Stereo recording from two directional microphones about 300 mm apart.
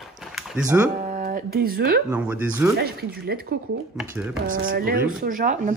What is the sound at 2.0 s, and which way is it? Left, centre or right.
Speech, centre.